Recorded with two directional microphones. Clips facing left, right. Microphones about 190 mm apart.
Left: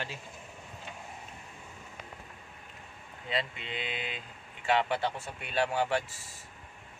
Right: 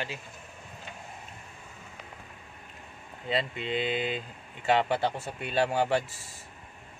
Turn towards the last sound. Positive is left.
turn(degrees=-35)  # may be behind; listen again after turning